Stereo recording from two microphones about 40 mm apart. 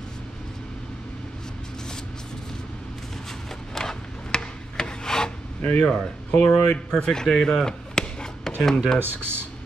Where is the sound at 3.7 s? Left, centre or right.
Centre.